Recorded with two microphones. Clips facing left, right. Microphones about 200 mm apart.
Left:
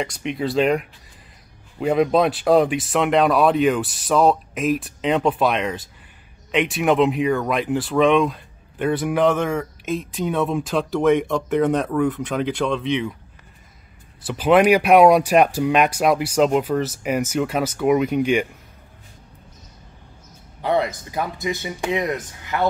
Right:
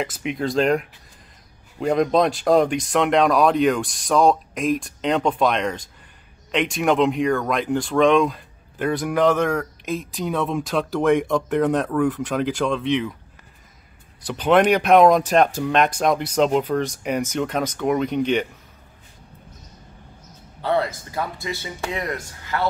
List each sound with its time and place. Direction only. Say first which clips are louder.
0.0 s speech: even; centre (ahead or behind)
14.2 s speech: left 2 dB; 5° left (ahead or behind)
20.6 s speech: left 1 dB; 15° left (ahead or behind)